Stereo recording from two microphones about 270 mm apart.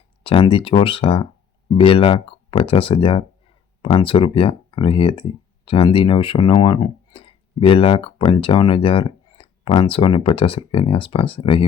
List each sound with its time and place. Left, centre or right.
0.2 s speech: centre